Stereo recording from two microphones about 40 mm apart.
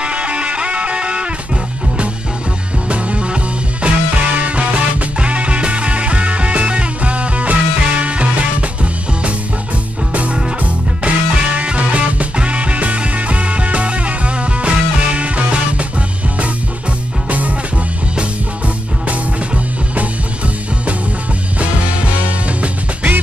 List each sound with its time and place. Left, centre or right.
0.0 s music: right
2.9 s music: right
10.1 s music: right